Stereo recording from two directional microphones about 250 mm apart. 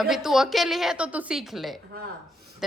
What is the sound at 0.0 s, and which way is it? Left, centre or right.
A woman's voice, centre.